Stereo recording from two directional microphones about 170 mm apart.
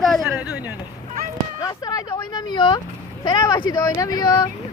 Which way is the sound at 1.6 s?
20° left (ahead or behind).